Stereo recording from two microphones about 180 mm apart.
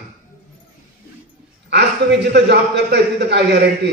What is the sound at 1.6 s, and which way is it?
A man's voice, 70° right (ahead or behind).